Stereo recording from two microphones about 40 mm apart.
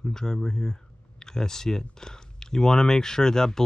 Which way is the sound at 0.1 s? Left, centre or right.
Centre.